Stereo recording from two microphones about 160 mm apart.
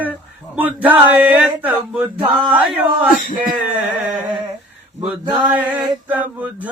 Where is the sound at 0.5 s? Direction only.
10° right (ahead or behind).